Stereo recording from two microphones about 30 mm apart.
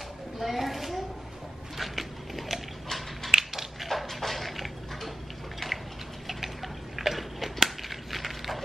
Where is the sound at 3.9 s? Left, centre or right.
Centre.